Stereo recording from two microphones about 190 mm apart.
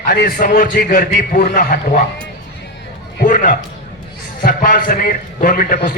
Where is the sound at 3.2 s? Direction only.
45° left (ahead or behind).